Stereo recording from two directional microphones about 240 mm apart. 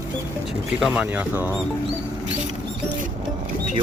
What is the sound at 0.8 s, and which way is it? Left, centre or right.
Speech, centre.